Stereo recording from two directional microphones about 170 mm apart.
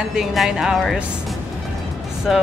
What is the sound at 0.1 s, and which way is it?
Speech, centre (ahead or behind).